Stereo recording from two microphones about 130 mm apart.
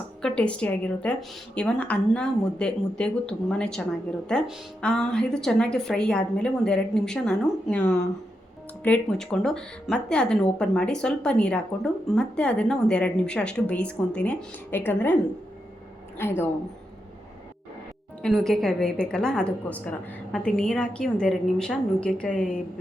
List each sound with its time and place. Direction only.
0.2 s a woman's voice: 5° left (ahead or behind)
18.2 s a woman's voice: 5° left (ahead or behind)